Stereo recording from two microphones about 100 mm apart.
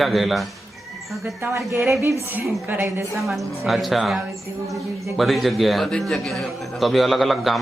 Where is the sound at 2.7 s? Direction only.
20° right (ahead or behind).